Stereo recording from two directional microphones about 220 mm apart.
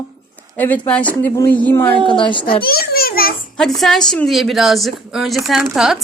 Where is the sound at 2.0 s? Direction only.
20° left (ahead or behind).